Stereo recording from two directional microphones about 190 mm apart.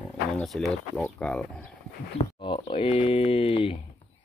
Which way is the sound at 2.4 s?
25° left (ahead or behind).